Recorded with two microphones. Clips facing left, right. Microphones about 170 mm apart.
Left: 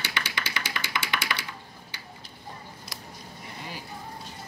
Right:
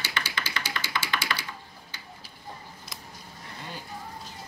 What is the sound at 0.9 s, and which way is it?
Tap, 15° left (ahead or behind).